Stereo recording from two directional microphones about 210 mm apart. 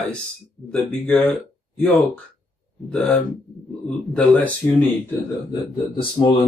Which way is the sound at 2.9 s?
5° left (ahead or behind).